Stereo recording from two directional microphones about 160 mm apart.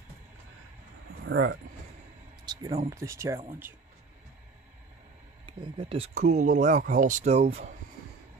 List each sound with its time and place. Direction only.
2.4 s speech: 20° right (ahead or behind)
5.5 s speech: 30° right (ahead or behind)